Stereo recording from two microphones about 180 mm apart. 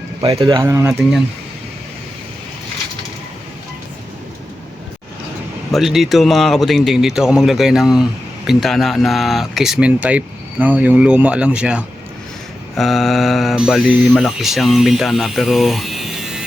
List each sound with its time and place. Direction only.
0.2 s speech: 25° right (ahead or behind)
5.7 s speech: centre (ahead or behind)